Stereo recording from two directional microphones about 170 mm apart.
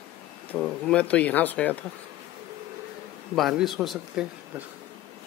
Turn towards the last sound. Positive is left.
turn(degrees=0)  # may be behind; listen again after turning